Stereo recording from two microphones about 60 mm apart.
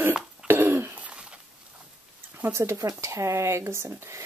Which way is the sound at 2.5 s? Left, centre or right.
Right.